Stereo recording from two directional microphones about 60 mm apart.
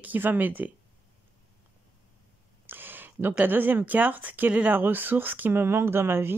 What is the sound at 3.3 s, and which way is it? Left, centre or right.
Speech, right.